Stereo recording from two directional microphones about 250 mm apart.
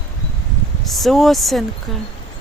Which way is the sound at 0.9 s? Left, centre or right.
Centre.